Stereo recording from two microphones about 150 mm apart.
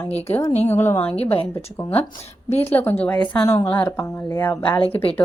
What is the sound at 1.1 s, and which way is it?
Speech, 40° left (ahead or behind).